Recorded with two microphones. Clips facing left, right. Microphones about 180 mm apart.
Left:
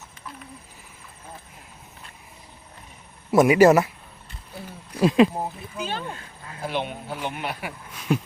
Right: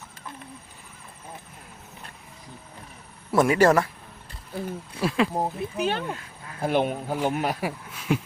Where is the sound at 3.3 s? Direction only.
10° left (ahead or behind).